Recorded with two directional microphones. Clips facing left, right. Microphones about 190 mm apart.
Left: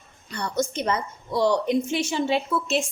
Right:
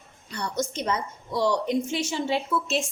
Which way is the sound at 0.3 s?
60° left (ahead or behind).